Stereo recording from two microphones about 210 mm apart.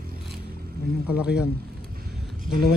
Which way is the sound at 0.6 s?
45° right (ahead or behind).